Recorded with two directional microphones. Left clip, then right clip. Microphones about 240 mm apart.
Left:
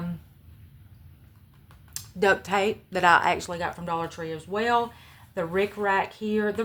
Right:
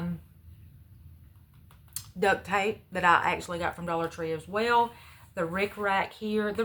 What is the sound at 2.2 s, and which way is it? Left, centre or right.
Speech, left.